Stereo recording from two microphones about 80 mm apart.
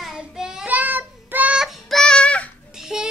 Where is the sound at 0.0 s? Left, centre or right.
Centre.